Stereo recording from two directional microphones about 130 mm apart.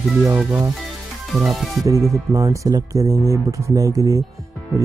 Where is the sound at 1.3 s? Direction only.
Centre (ahead or behind).